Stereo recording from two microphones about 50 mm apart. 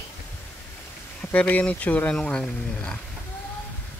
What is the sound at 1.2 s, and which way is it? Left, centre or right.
Speech, left.